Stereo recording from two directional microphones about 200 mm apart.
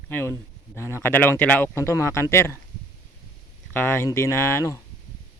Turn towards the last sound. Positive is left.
turn(degrees=15)  # may be behind; listen again after turning